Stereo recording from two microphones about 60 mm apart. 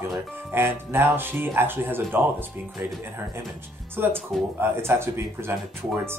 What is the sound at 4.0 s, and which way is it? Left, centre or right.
Speech, right.